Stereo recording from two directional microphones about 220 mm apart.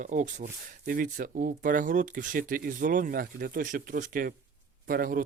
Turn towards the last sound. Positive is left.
turn(degrees=-40)  # may be behind; listen again after turning